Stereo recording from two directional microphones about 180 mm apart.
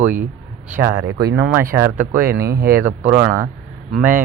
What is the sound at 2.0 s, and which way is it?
Speech, 50° right (ahead or behind).